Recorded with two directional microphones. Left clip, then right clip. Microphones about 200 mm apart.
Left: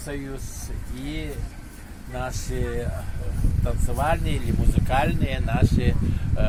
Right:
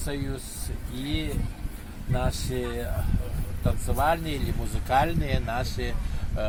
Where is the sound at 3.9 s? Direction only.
5° left (ahead or behind).